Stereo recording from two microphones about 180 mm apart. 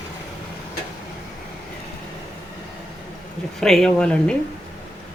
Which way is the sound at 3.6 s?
5° left (ahead or behind).